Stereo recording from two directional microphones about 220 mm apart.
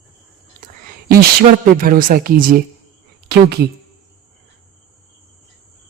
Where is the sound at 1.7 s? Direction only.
40° right (ahead or behind).